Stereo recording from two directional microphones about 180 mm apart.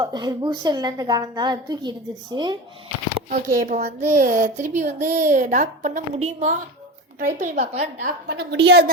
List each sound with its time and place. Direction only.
0.0 s a woman's voice: 25° right (ahead or behind)
3.2 s a woman's voice: 45° right (ahead or behind)
8.5 s a woman's voice: 65° right (ahead or behind)